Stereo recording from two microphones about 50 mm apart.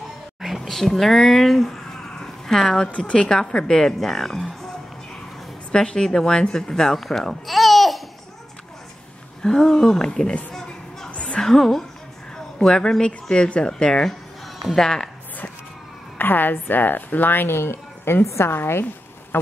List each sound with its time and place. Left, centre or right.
0.6 s a sound: centre
3.0 s a woman's voice: centre
5.7 s speech: centre
9.4 s a woman's voice: centre
11.1 s a sound: left
11.4 s a woman's voice: centre
16.2 s a woman's voice: left
18.2 s a woman's voice: left
18.5 s a woman's voice: left
19.3 s insect: left